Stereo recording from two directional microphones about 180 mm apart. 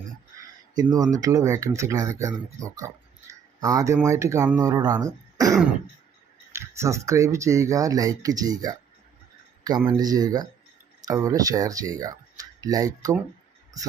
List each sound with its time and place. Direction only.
0.8 s speech: 20° right (ahead or behind)